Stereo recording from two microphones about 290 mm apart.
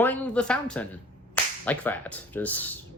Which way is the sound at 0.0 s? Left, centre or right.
Centre.